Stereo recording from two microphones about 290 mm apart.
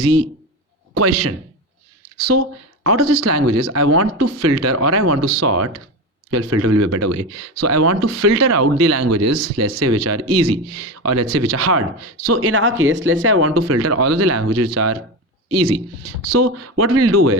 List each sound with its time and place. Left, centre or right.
0.0 s speech: right
16.4 s speech: right